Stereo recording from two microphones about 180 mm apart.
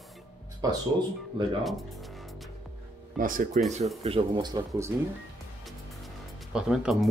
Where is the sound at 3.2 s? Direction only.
50° right (ahead or behind).